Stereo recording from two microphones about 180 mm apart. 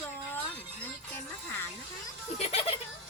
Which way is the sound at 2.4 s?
35° left (ahead or behind).